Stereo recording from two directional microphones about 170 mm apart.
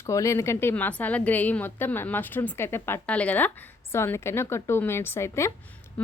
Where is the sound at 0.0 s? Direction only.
20° left (ahead or behind).